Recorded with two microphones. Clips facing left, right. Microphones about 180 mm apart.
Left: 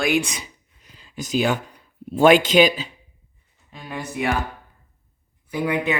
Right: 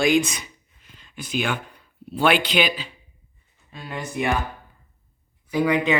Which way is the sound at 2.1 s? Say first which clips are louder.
Left 6 dB; 45° left (ahead or behind).